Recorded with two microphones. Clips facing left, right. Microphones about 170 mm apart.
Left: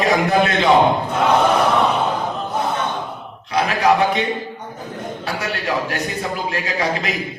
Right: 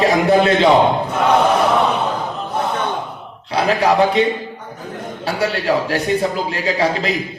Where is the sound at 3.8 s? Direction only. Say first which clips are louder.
Right 1 dB; 30° right (ahead or behind).